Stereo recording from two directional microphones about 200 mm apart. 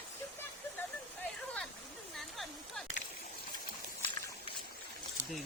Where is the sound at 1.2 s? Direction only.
5° left (ahead or behind).